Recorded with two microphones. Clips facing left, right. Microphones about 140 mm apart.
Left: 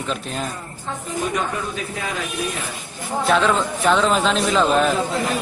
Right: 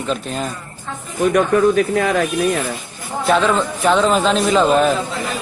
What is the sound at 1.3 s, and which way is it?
Speech, 65° right (ahead or behind).